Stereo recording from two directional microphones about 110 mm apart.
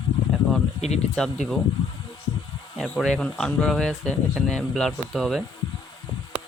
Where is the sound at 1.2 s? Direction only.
5° left (ahead or behind).